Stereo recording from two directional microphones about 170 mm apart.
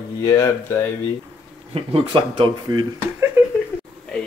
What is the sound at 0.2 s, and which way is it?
Speech, 20° left (ahead or behind).